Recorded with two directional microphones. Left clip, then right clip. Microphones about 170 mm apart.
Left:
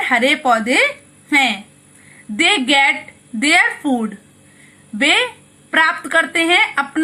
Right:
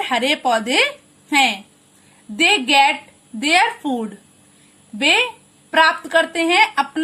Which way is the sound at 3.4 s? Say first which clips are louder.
Left 2 dB; 20° right (ahead or behind).